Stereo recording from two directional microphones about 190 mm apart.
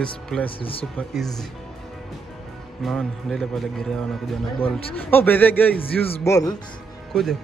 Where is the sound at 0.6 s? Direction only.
30° left (ahead or behind).